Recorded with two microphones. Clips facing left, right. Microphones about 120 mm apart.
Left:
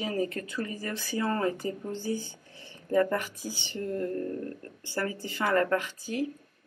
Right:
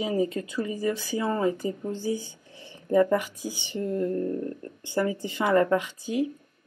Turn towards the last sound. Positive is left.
turn(degrees=-15)  # may be behind; listen again after turning